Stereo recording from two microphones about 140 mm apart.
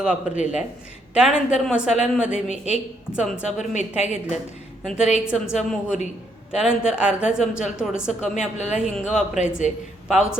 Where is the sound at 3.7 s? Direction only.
55° left (ahead or behind).